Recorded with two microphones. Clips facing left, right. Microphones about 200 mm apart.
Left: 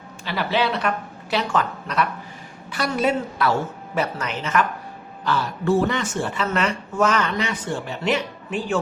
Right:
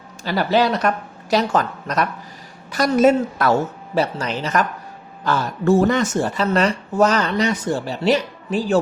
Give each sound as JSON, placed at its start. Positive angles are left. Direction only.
{"t": 0.3, "sound": "a woman's voice", "side_deg": -40}
{"t": 3.9, "sound": "speech", "side_deg": -30}